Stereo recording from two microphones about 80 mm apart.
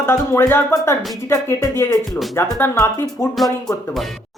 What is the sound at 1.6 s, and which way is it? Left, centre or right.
Speech, left.